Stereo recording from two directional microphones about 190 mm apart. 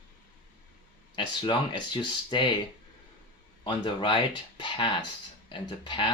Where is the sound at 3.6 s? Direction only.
25° left (ahead or behind).